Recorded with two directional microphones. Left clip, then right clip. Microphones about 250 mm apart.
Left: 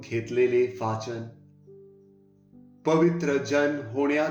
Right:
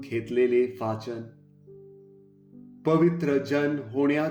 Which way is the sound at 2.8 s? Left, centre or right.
Right.